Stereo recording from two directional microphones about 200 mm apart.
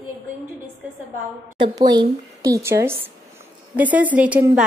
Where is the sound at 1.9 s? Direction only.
20° right (ahead or behind).